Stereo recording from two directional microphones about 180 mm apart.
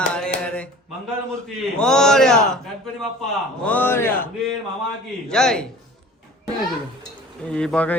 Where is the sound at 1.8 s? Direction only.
5° left (ahead or behind).